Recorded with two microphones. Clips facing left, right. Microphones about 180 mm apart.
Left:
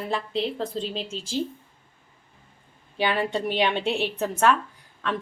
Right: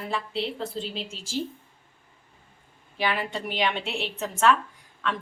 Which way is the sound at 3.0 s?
30° left (ahead or behind).